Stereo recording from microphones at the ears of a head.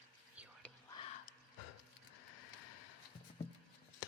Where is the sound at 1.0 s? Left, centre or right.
Left.